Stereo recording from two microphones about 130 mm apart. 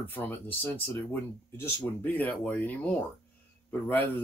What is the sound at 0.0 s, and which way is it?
Speech, 15° left (ahead or behind).